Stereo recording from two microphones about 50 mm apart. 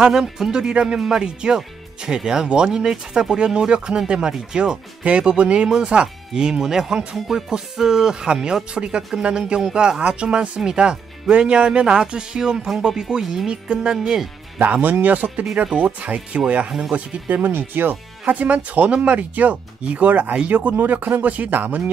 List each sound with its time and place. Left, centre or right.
0.0 s speech: centre
14.6 s speech: right
17.4 s speech: right
18.2 s speech: right